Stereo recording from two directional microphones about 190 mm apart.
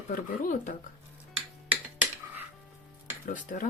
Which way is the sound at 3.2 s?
45° left (ahead or behind).